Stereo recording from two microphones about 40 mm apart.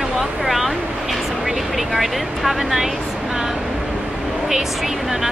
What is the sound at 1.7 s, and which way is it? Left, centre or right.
Speech, centre.